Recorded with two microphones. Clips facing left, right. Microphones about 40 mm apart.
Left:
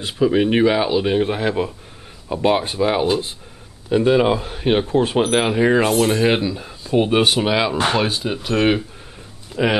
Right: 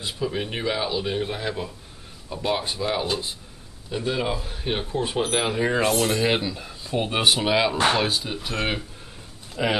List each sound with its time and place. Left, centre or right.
0.0 s speech: left